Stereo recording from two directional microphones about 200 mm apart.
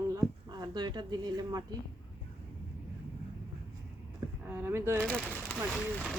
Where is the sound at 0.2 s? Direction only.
20° right (ahead or behind).